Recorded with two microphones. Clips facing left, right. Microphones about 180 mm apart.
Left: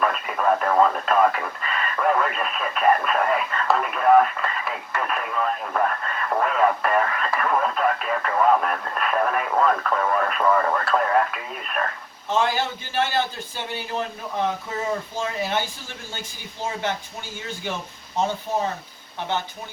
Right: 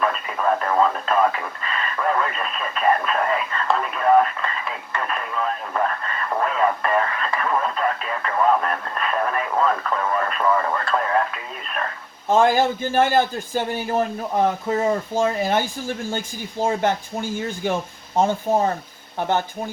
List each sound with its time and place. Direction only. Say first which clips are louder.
0.0 s speech: even; centre (ahead or behind)
12.3 s a man's voice: right 6 dB; 50° right (ahead or behind)